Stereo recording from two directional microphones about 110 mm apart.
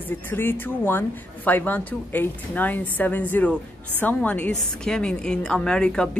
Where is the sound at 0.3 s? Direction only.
20° left (ahead or behind).